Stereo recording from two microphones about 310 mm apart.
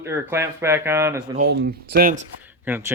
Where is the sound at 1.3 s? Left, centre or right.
Right.